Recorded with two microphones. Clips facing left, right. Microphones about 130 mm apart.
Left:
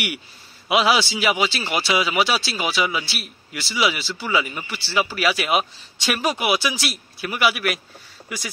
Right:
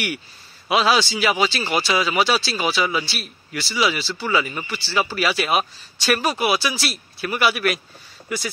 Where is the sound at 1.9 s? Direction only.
15° left (ahead or behind).